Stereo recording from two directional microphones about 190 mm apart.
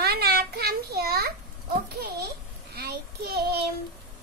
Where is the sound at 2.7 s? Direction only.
55° right (ahead or behind).